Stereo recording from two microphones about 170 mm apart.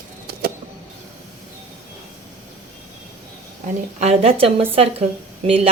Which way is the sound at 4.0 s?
35° right (ahead or behind).